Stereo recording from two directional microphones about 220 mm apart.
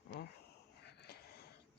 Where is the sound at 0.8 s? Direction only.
45° left (ahead or behind).